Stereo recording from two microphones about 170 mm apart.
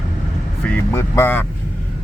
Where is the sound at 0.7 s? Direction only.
15° left (ahead or behind).